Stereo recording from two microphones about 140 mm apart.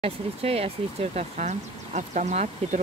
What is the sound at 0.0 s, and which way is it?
Speech, 45° right (ahead or behind).